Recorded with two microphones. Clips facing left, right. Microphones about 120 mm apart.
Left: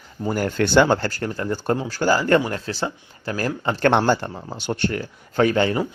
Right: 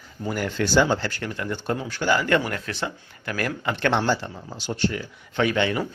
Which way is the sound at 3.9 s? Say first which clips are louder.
Left 5 dB; 55° left (ahead or behind).